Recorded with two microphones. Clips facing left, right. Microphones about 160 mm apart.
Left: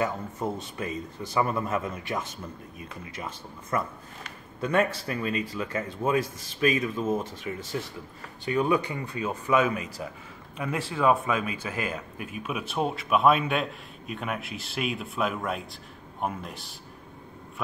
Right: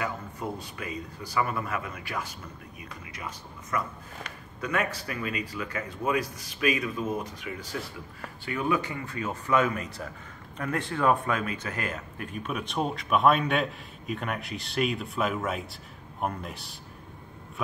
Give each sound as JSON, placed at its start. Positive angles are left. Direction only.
{"t": 0.0, "sound": "speech", "side_deg": 25}
{"t": 8.5, "sound": "speech", "side_deg": 20}